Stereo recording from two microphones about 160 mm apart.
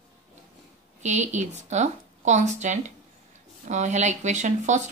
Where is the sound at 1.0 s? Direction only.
45° right (ahead or behind).